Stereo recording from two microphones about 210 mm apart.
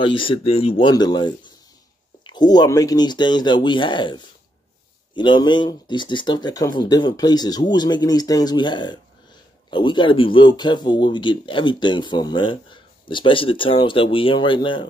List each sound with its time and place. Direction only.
0.0 s speech: 25° left (ahead or behind)